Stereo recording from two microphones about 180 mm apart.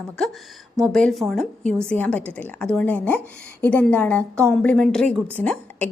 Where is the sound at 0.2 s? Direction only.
5° left (ahead or behind).